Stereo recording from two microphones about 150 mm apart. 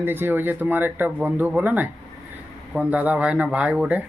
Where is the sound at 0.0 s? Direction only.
15° right (ahead or behind).